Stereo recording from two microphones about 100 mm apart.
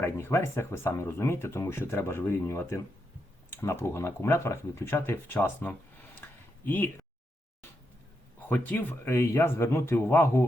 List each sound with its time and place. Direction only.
0.0 s speech: 25° left (ahead or behind)
6.2 s a sound: 20° left (ahead or behind)
6.7 s speech: 20° left (ahead or behind)
8.4 s speech: 15° left (ahead or behind)